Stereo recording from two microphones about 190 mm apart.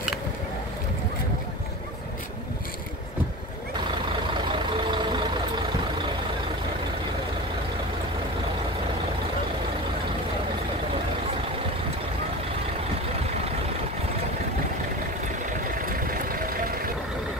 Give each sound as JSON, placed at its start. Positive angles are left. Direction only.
{"t": 4.5, "sound": "vehicle", "side_deg": -25}
{"t": 15.8, "sound": "vehicle", "side_deg": -50}